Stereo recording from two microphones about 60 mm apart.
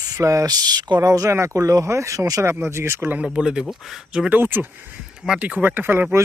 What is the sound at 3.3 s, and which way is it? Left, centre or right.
Speech, centre.